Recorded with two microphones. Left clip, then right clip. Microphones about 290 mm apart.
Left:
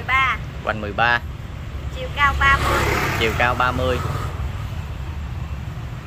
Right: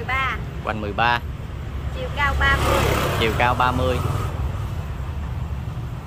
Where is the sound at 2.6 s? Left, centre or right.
Right.